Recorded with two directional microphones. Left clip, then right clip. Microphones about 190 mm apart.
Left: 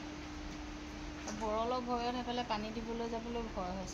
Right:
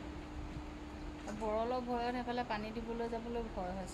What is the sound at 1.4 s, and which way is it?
Speech, 20° left (ahead or behind).